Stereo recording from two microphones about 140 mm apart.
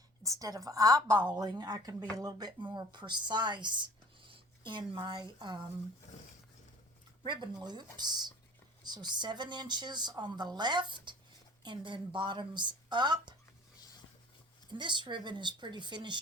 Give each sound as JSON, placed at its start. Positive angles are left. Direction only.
{"t": 0.2, "sound": "a woman's voice", "side_deg": -25}
{"t": 7.3, "sound": "a woman's voice", "side_deg": -30}
{"t": 14.7, "sound": "a woman's voice", "side_deg": -35}